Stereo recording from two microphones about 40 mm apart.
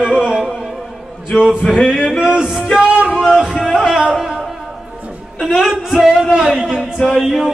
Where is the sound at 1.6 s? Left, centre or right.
Centre.